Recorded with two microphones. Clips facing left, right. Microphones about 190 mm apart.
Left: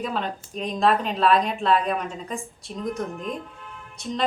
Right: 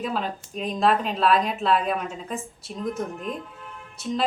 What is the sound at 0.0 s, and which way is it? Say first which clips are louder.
A woman's voice: even; 5° right (ahead or behind).